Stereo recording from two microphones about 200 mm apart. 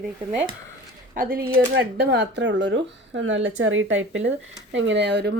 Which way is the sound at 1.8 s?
60° right (ahead or behind).